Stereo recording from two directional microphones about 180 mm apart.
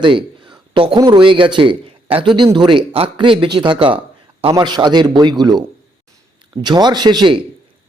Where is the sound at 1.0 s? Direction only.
25° right (ahead or behind).